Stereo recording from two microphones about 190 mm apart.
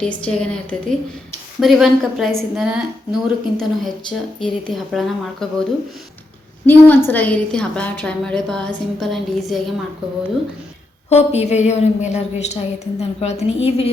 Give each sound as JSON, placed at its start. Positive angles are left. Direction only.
{"t": 0.0, "sound": "a woman's voice", "side_deg": 5}
{"t": 6.7, "sound": "a woman's voice", "side_deg": 10}
{"t": 11.1, "sound": "a woman's voice", "side_deg": 35}